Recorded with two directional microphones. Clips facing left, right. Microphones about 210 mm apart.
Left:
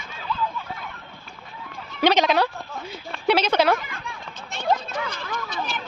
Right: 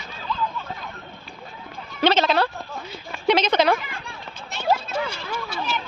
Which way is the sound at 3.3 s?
10° left (ahead or behind).